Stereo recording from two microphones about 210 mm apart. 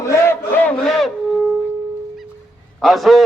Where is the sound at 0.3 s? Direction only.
10° left (ahead or behind).